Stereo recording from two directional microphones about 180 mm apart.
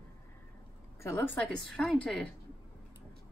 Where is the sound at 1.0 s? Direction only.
10° left (ahead or behind).